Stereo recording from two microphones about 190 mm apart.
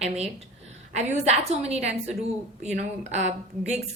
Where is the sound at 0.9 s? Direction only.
35° right (ahead or behind).